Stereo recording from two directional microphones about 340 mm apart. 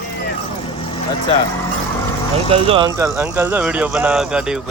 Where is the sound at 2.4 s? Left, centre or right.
Centre.